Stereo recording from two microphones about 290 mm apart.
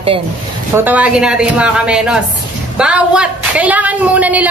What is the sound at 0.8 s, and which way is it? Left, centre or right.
A woman's voice, centre.